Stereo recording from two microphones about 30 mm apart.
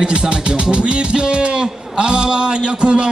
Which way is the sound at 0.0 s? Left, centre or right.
Right.